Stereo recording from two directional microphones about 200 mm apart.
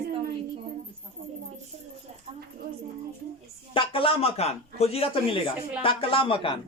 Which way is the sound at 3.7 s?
25° left (ahead or behind).